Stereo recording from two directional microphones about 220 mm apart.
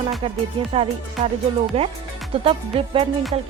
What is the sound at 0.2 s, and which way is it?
Speech, 25° right (ahead or behind).